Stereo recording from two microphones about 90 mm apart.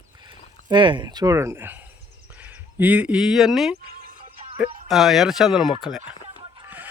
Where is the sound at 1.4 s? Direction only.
30° right (ahead or behind); by 3.7 s 5° right (ahead or behind).